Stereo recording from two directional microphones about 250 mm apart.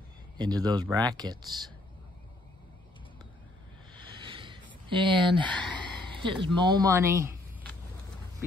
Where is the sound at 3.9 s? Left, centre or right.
Centre.